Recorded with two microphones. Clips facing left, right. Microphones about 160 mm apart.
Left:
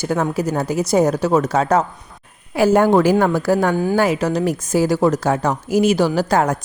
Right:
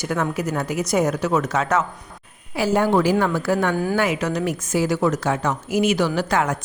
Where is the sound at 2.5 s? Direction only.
50° left (ahead or behind).